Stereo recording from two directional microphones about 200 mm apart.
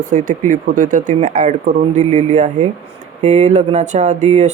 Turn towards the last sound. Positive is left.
turn(degrees=-35)  # may be behind; listen again after turning